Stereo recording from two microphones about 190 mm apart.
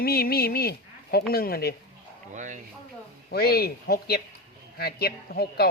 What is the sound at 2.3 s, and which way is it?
Speech, 40° right (ahead or behind).